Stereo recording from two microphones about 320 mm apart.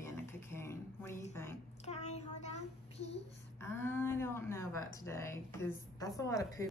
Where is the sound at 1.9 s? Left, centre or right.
Left.